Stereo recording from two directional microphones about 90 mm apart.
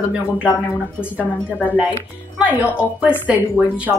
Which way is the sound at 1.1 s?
20° left (ahead or behind).